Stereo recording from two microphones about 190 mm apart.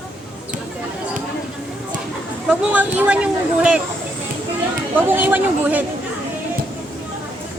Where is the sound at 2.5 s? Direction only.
5° right (ahead or behind).